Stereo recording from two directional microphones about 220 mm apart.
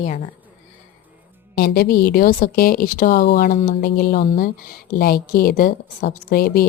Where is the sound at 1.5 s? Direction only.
45° left (ahead or behind).